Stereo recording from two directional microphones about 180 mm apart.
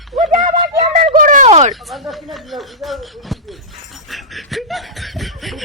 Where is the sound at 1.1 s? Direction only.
45° right (ahead or behind).